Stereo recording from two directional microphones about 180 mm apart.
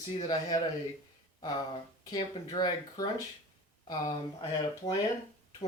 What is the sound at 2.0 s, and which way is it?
Speech, 25° left (ahead or behind).